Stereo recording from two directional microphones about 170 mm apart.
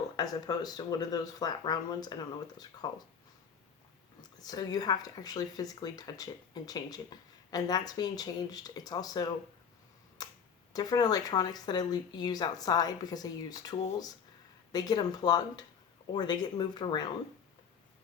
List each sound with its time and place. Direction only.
0.2 s speech: 25° left (ahead or behind)
4.2 s speech: 20° left (ahead or behind)
10.2 s a sound: 20° left (ahead or behind)
10.7 s speech: 20° left (ahead or behind)